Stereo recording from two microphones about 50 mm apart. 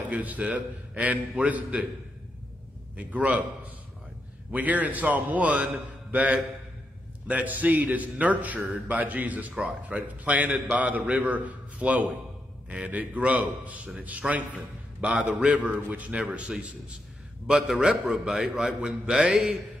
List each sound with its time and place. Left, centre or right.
0.1 s a man's voice: right
3.0 s a man's voice: right
17.7 s a man's voice: centre
18.7 s a man's voice: centre